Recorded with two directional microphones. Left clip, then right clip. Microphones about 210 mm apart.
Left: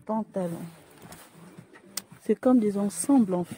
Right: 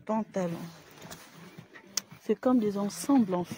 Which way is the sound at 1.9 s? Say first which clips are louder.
Left 3 dB; 40° left (ahead or behind).